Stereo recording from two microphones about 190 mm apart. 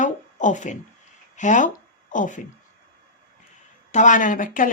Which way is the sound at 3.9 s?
40° left (ahead or behind).